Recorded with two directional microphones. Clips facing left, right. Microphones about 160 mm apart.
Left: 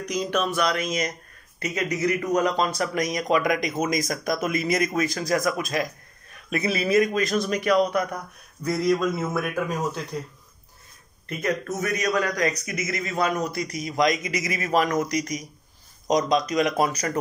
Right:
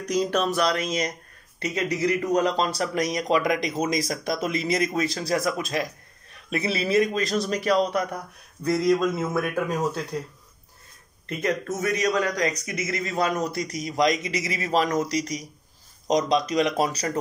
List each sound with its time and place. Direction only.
0.1 s speech: 40° right (ahead or behind)
11.4 s speech: 25° right (ahead or behind)